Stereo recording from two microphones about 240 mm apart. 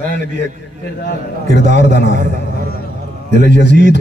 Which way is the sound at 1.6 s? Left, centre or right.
Right.